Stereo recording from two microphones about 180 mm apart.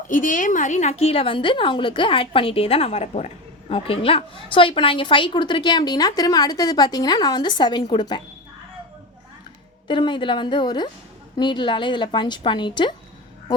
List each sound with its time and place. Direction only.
0.1 s a woman's voice: 45° left (ahead or behind); by 8.2 s 25° left (ahead or behind)
9.8 s a woman's voice: 25° left (ahead or behind)